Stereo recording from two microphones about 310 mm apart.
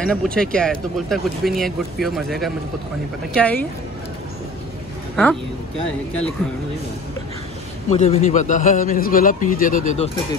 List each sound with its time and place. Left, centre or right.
0.0 s speech: centre
5.1 s speech: centre
7.9 s a man's voice: left